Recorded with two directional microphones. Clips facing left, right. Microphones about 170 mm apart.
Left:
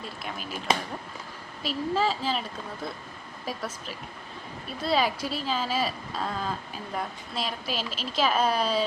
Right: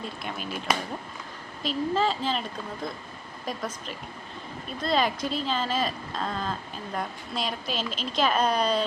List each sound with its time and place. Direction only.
0.2 s speech: centre (ahead or behind)
0.7 s speech: 25° left (ahead or behind)
1.6 s speech: 5° left (ahead or behind)
3.4 s speech: 5° left (ahead or behind)